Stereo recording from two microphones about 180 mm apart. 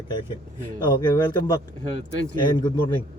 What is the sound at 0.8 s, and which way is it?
Speech, 25° left (ahead or behind).